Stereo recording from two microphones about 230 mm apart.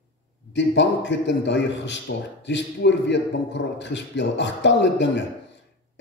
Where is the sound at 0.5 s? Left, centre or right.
Left.